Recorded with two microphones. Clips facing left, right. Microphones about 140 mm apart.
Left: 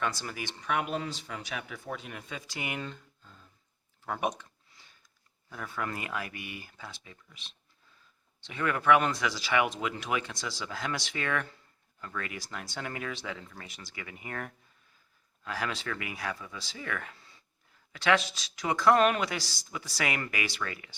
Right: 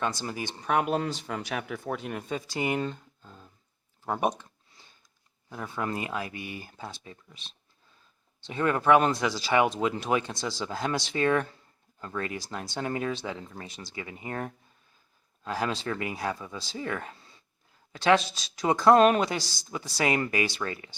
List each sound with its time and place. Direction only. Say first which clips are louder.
0.0 s speech: right 3 dB; 25° right (ahead or behind)
5.5 s speech: right 4 dB; 25° right (ahead or behind)